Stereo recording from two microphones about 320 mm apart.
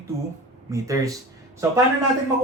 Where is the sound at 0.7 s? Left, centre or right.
Centre.